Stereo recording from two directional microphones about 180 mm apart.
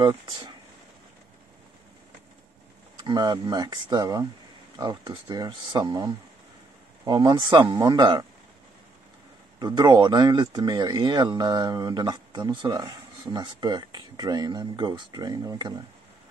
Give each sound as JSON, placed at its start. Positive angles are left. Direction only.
{"t": 0.0, "sound": "speech", "side_deg": -25}
{"t": 3.0, "sound": "speech", "side_deg": -25}
{"t": 9.6, "sound": "speech", "side_deg": -25}